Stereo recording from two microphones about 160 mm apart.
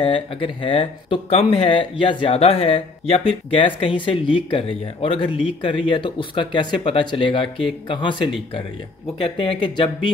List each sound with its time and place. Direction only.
0.0 s speech: 35° left (ahead or behind)